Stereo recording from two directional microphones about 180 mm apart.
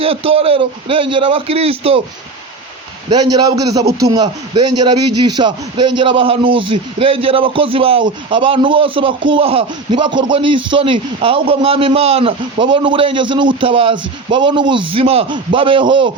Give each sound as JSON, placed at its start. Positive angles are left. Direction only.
{"t": 0.0, "sound": "a man's voice", "side_deg": -30}
{"t": 3.1, "sound": "a man's voice", "side_deg": -20}